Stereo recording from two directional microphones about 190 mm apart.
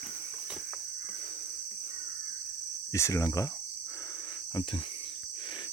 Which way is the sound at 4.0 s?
20° left (ahead or behind).